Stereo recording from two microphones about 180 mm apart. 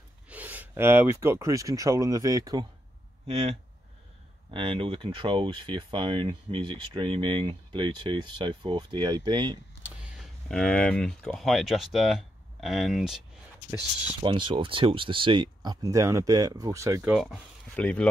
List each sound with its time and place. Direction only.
0.3 s speech: 10° right (ahead or behind)
4.5 s speech: 30° right (ahead or behind)
9.8 s speech: centre (ahead or behind)
14.2 s speech: 25° right (ahead or behind)
17.1 s speech: centre (ahead or behind)